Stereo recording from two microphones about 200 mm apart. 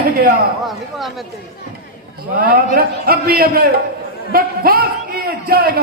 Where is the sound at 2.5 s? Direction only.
50° right (ahead or behind).